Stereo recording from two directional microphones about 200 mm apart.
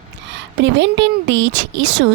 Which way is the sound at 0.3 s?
65° right (ahead or behind).